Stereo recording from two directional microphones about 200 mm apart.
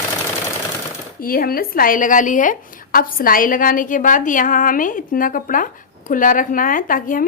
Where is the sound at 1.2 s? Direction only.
45° left (ahead or behind).